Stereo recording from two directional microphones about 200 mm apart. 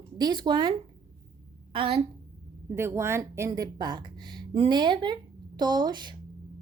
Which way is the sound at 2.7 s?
15° right (ahead or behind).